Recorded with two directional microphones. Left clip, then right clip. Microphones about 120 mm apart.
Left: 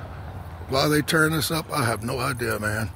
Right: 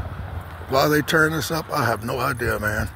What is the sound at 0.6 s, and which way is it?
Speech, 15° left (ahead or behind).